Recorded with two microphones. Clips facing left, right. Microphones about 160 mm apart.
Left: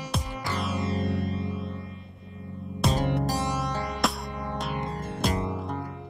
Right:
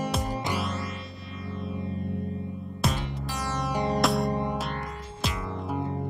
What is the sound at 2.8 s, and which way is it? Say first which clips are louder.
Music: left 5 dB; centre (ahead or behind).